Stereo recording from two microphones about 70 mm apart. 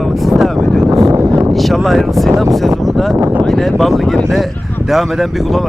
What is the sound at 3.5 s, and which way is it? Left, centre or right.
Speech, centre.